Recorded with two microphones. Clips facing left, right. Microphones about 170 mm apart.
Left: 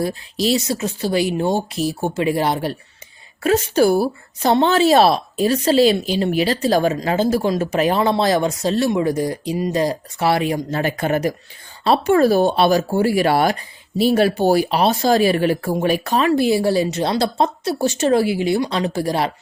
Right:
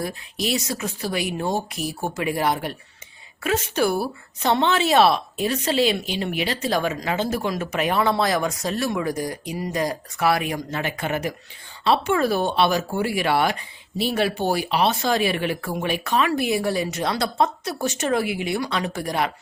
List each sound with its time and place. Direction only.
0.0 s speech: 30° left (ahead or behind)